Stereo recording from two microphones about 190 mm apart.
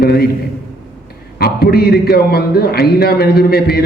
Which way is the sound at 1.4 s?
55° left (ahead or behind).